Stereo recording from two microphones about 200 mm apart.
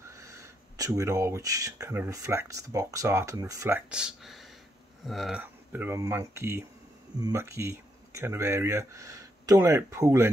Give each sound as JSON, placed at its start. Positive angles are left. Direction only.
{"t": 0.1, "sound": "speech", "side_deg": -15}